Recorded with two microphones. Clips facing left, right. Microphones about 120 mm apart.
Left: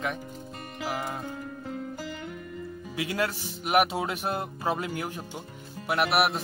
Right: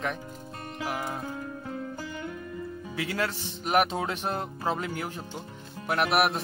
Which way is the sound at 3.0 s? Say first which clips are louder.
Left 1 dB; 15° left (ahead or behind).